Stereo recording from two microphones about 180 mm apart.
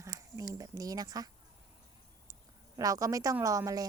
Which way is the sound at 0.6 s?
20° right (ahead or behind).